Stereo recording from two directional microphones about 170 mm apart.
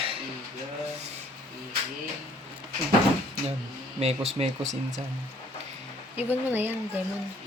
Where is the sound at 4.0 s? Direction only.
40° right (ahead or behind).